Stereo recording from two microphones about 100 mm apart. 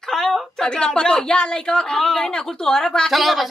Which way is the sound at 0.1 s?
5° left (ahead or behind).